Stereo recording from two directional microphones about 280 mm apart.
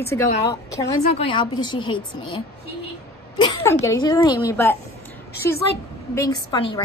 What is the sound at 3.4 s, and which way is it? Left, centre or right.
A woman's voice, centre.